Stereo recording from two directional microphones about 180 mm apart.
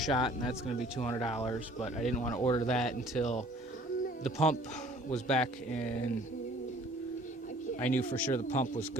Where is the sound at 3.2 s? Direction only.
40° left (ahead or behind).